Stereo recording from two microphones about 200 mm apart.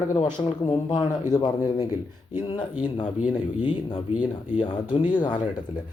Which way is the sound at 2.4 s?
20° left (ahead or behind).